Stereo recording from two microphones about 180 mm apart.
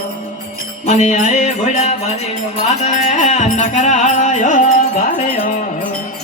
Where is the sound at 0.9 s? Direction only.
40° left (ahead or behind).